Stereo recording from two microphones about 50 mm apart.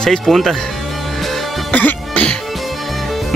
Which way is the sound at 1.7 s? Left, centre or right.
Left.